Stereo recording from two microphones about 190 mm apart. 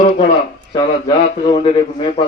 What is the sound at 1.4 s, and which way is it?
Speech, 25° left (ahead or behind).